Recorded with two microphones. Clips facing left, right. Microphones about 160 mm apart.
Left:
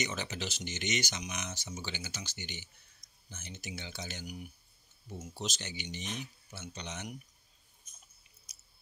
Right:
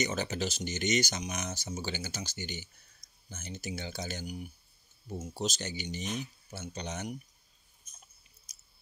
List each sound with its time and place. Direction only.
0.0 s speech: 40° right (ahead or behind)
8.5 s chewing: 40° right (ahead or behind)